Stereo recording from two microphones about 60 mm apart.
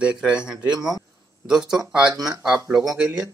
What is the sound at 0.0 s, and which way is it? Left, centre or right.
Speech, centre.